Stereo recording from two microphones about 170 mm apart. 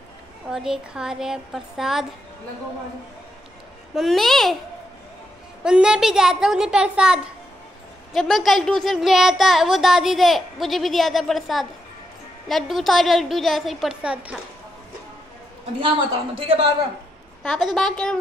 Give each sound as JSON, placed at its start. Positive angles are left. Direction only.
{"t": 0.5, "sound": "speech", "side_deg": -5}
{"t": 3.9, "sound": "speech", "side_deg": 0}
{"t": 5.6, "sound": "speech", "side_deg": -5}
{"t": 16.3, "sound": "a man's voice", "side_deg": -35}
{"t": 17.4, "sound": "speech", "side_deg": 0}